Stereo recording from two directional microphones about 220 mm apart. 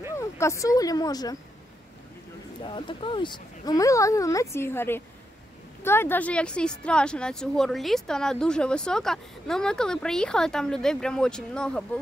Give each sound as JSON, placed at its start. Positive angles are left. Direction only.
{"t": 0.1, "sound": "speech", "side_deg": 15}
{"t": 2.6, "sound": "speech", "side_deg": 20}